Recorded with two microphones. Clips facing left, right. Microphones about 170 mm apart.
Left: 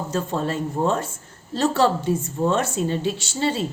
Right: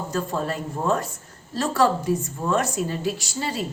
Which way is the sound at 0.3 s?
30° left (ahead or behind).